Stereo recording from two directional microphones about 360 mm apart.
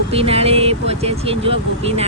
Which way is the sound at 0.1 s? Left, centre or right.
Centre.